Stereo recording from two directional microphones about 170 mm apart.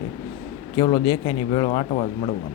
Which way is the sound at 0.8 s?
20° left (ahead or behind).